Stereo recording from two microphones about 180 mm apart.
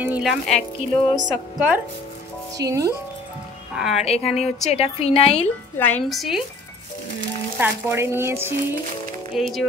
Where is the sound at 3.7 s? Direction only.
5° right (ahead or behind).